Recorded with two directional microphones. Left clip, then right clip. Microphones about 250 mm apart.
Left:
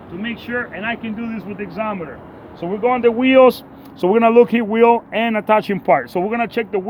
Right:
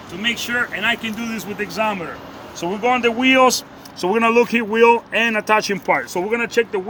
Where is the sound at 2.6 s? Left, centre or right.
Centre.